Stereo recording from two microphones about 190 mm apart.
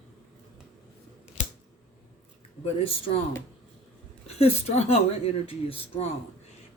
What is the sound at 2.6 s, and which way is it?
Speech, 30° left (ahead or behind).